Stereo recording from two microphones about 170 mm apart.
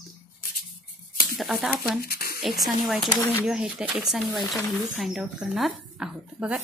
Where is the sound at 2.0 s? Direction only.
60° left (ahead or behind).